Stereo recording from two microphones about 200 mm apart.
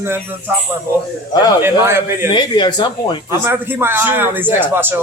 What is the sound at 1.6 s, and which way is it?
Speech, 10° right (ahead or behind).